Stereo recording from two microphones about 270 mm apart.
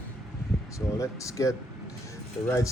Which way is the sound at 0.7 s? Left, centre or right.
Centre.